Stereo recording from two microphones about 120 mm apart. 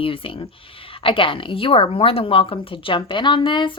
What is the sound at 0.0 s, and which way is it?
A woman's voice, 50° left (ahead or behind).